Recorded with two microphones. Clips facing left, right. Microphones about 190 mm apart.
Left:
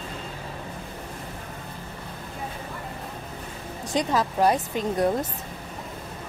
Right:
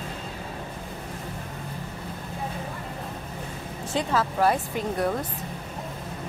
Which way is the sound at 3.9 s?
15° left (ahead or behind).